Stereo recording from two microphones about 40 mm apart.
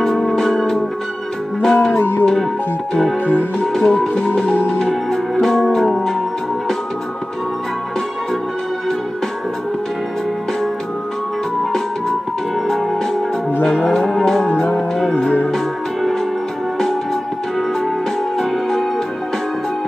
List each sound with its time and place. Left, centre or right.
0.0 s music: centre
2.0 s music: left
3.5 s music: centre
13.8 s music: centre
18.4 s music: centre